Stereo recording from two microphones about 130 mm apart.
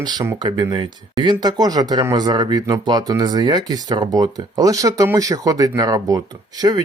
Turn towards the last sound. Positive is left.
turn(degrees=-30)  # may be behind; listen again after turning